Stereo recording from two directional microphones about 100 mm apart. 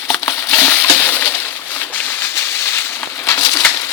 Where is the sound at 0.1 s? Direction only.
30° left (ahead or behind).